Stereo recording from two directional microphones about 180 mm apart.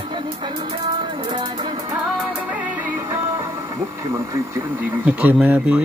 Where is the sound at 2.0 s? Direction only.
Centre (ahead or behind).